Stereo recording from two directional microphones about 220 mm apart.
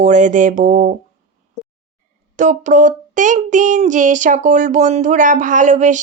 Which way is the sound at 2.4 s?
35° right (ahead or behind).